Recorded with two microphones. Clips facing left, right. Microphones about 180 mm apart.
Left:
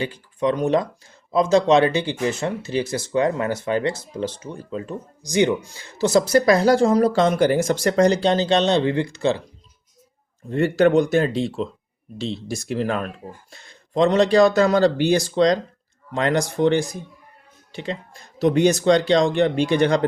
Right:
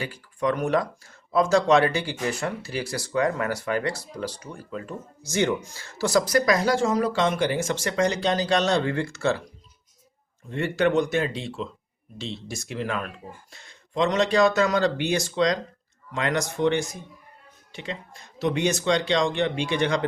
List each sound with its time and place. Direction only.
0.0 s speech: 20° left (ahead or behind)
10.5 s speech: 40° left (ahead or behind)